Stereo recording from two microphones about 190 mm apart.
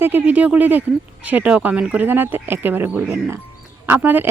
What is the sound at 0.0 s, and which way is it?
Speech, 10° right (ahead or behind).